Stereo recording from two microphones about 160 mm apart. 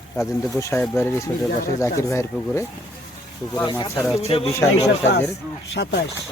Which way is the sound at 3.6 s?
25° left (ahead or behind).